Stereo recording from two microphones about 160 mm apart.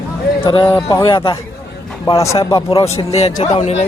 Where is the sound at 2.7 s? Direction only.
40° left (ahead or behind).